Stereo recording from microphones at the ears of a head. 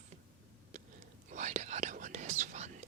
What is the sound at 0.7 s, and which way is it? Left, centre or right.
Whispering, right.